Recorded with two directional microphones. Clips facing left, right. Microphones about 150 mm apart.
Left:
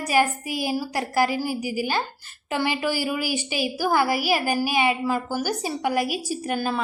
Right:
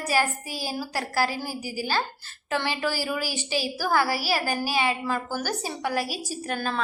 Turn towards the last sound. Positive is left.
turn(degrees=10)  # may be behind; listen again after turning